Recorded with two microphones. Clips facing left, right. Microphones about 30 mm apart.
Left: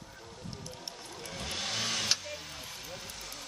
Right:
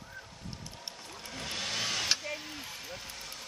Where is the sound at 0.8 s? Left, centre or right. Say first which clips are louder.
Left 1 dB; centre.